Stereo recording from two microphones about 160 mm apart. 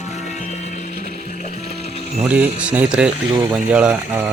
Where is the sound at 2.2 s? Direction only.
10° right (ahead or behind).